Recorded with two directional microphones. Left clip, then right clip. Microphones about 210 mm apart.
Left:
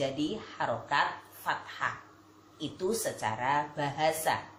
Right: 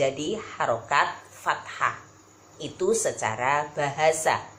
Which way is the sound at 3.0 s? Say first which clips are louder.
Right 6 dB; 10° right (ahead or behind).